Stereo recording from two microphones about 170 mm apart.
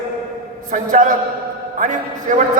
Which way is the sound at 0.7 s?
50° right (ahead or behind).